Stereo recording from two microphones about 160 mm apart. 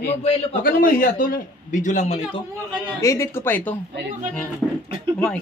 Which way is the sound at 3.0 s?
20° left (ahead or behind).